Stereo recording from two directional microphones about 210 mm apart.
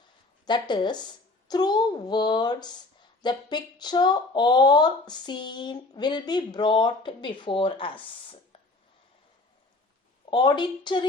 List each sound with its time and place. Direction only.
0.4 s speech: 20° left (ahead or behind)
10.2 s speech: 20° left (ahead or behind)